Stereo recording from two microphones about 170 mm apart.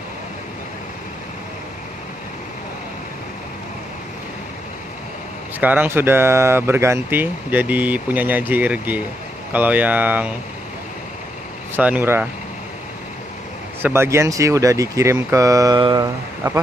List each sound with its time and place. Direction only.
5.6 s speech: 10° right (ahead or behind)
11.7 s speech: 10° right (ahead or behind)
13.8 s speech: 15° right (ahead or behind)